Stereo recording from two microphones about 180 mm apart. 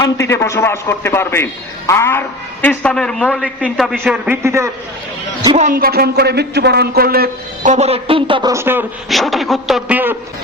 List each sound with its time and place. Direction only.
0.0 s a man's voice: 15° left (ahead or behind); by 4.7 s 15° right (ahead or behind)
5.5 s speech: 50° right (ahead or behind); by 8.5 s 25° right (ahead or behind)
8.5 s a man's voice: 10° right (ahead or behind)
9.0 s a man's voice: centre (ahead or behind)